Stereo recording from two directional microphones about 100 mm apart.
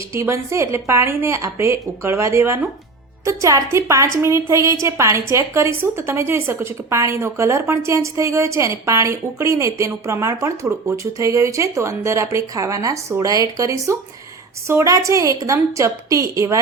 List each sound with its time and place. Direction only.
0.1 s a woman's voice: 30° right (ahead or behind)